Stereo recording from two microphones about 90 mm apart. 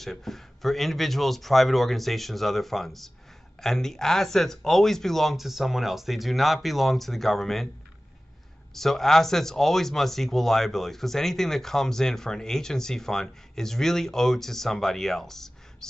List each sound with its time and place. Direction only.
0.0 s speech: 5° left (ahead or behind)
8.7 s speech: 5° left (ahead or behind)